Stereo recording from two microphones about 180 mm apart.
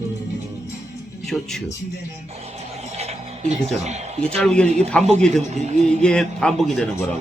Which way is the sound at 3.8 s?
40° right (ahead or behind).